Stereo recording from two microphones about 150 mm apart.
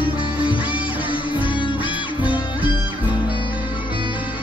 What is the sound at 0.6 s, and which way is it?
Music, 10° right (ahead or behind).